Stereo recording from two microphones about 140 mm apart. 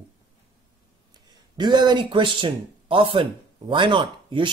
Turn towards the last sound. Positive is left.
turn(degrees=-35)  # may be behind; listen again after turning